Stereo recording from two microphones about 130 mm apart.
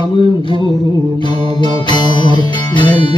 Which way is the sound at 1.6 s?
35° left (ahead or behind).